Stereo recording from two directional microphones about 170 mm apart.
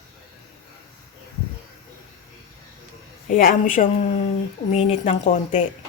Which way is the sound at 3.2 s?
55° left (ahead or behind).